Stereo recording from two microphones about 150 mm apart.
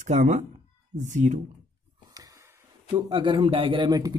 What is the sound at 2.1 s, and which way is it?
A man's voice, 25° right (ahead or behind).